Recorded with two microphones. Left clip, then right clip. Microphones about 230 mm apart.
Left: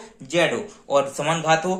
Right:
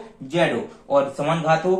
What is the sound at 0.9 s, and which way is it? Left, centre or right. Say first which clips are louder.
Speech: right 1 dB; left.